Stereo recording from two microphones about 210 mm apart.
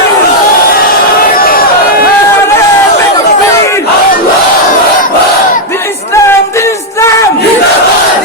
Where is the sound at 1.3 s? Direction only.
45° left (ahead or behind).